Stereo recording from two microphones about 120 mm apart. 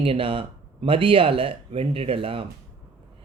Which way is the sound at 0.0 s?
50° right (ahead or behind).